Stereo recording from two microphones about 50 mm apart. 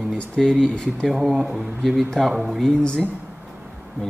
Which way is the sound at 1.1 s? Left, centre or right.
Centre.